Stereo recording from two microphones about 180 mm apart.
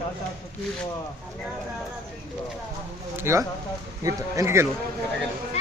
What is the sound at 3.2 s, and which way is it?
Speech, 15° right (ahead or behind).